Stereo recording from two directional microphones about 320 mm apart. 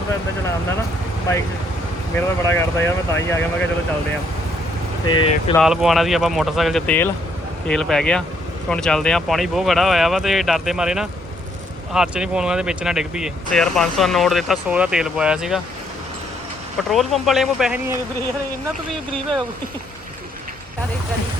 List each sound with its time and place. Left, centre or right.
2.5 s speech: centre
5.0 s speech: centre
5.5 s speech: centre
16.9 s speech: centre